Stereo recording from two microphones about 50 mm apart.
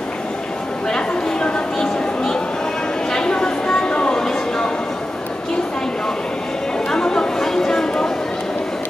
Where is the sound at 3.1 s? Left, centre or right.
Centre.